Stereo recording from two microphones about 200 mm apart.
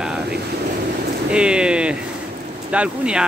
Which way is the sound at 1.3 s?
5° right (ahead or behind).